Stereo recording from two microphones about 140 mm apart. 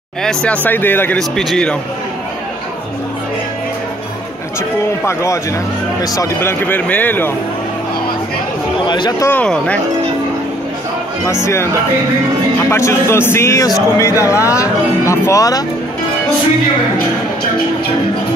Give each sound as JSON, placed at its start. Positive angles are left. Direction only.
{"t": 0.2, "sound": "speech", "side_deg": 5}
{"t": 1.3, "sound": "a man's voice", "side_deg": 0}
{"t": 5.0, "sound": "a man's voice", "side_deg": 20}
{"t": 6.6, "sound": "speech", "side_deg": 10}
{"t": 8.8, "sound": "speech", "side_deg": 30}
{"t": 9.3, "sound": "speech", "side_deg": 10}
{"t": 11.4, "sound": "a man's voice", "side_deg": 20}